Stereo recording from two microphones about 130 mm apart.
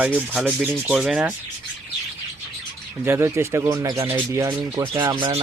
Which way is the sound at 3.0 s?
20° right (ahead or behind).